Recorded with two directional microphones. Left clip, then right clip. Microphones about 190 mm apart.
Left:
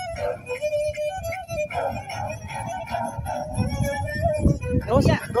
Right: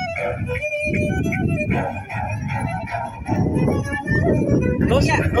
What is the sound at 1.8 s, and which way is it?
Music, 40° left (ahead or behind).